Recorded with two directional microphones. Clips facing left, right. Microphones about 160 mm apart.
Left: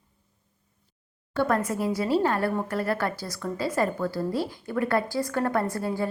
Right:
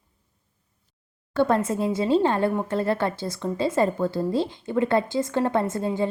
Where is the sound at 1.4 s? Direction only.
25° right (ahead or behind).